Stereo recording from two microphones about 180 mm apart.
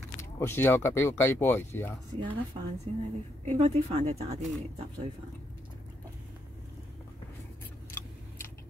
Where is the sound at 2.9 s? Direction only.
35° right (ahead or behind).